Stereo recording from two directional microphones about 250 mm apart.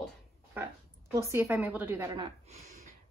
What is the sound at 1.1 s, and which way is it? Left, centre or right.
A woman's voice, centre.